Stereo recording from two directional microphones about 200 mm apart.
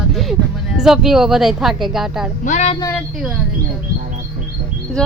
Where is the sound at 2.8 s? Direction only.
15° left (ahead or behind).